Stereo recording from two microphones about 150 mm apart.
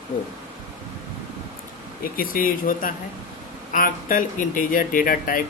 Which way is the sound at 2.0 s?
75° left (ahead or behind).